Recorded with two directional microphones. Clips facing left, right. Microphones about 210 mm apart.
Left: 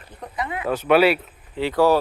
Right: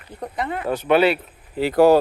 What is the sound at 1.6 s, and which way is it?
Speech, 40° right (ahead or behind).